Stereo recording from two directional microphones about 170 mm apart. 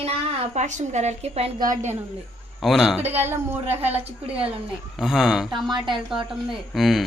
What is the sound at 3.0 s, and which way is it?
A woman's voice, 10° right (ahead or behind).